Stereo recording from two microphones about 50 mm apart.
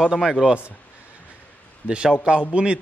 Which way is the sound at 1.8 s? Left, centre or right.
Centre.